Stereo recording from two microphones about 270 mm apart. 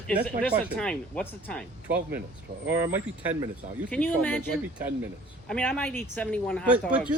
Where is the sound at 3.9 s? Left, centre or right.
Centre.